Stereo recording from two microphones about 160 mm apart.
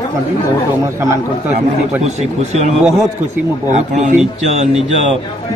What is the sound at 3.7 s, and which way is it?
Speech, 50° right (ahead or behind).